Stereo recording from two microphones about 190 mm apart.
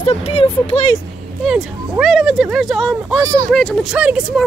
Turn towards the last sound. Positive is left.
turn(degrees=-5)  # may be behind; listen again after turning